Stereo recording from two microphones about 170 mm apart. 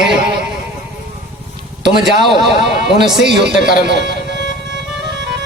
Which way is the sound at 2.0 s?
Centre (ahead or behind).